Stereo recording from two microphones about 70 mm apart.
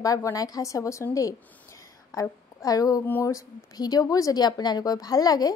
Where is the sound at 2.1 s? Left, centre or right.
Left.